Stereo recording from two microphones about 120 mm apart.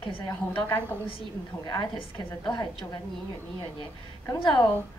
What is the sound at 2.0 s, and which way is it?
Speech, 40° left (ahead or behind).